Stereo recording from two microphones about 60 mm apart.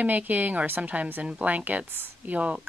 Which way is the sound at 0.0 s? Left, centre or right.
Right.